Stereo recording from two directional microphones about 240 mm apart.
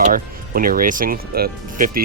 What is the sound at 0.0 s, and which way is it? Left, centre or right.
Speech, right.